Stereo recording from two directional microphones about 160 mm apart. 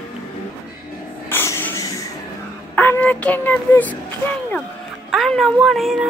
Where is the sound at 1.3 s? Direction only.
15° left (ahead or behind).